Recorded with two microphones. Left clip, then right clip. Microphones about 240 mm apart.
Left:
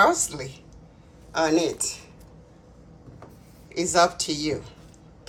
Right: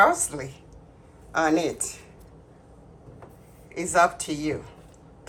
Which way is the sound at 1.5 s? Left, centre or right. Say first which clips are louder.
Left 1 dB; centre.